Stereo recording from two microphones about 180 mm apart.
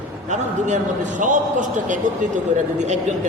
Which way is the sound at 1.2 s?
45° right (ahead or behind).